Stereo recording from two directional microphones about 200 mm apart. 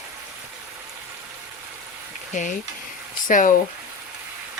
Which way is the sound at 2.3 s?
40° left (ahead or behind).